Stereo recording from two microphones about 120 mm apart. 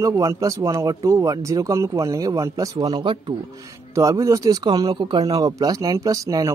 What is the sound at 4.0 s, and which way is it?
Speech, 25° right (ahead or behind).